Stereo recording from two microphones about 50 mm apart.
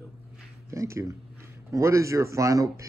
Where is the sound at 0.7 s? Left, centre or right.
Right.